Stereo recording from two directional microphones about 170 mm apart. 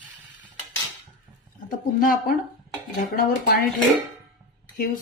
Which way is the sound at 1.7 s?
55° left (ahead or behind).